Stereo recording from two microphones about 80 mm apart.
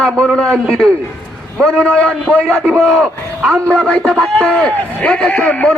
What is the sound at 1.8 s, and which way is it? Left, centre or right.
Speech, centre.